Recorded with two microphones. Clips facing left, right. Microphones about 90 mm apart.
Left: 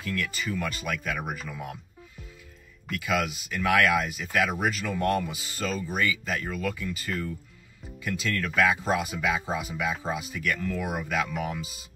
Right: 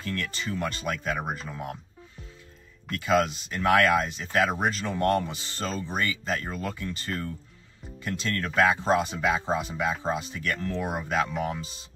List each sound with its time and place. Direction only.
0.0 s speech: 35° right (ahead or behind)
3.0 s speech: 35° right (ahead or behind)
5.3 s speech: 10° left (ahead or behind)
5.6 s speech: 30° right (ahead or behind)